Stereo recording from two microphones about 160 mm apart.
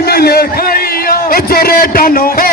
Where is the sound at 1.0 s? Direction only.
70° left (ahead or behind).